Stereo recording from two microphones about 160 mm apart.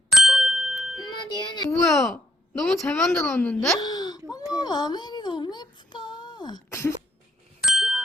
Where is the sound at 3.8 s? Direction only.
25° left (ahead or behind).